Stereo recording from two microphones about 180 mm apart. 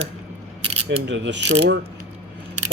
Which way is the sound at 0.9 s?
80° right.